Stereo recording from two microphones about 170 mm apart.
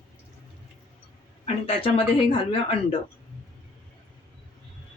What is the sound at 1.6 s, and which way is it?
Speech, 35° left (ahead or behind).